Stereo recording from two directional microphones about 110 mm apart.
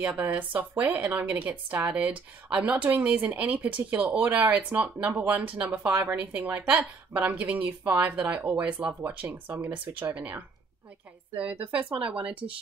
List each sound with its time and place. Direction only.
0.0 s a woman's voice: 15° right (ahead or behind)